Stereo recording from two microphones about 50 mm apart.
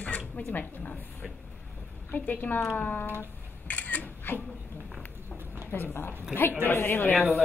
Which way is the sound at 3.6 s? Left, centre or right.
Left.